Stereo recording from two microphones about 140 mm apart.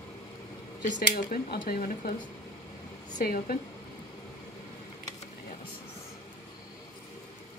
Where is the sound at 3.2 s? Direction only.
90° left.